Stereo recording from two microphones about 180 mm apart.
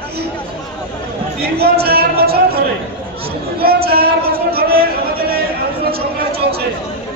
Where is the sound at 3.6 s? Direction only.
60° right (ahead or behind).